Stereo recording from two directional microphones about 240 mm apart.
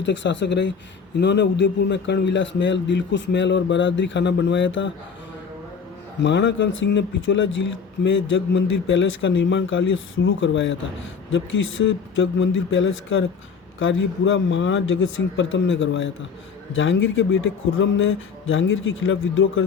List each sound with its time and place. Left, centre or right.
0.0 s a man's voice: left
6.2 s a man's voice: left